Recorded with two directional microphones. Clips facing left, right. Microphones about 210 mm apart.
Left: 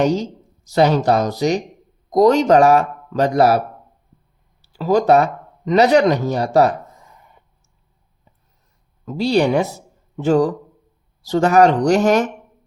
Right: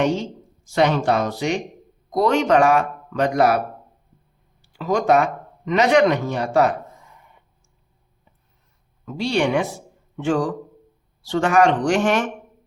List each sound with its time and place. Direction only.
0.0 s speech: 40° left (ahead or behind)
4.7 s speech: 35° left (ahead or behind)
9.0 s speech: 35° left (ahead or behind)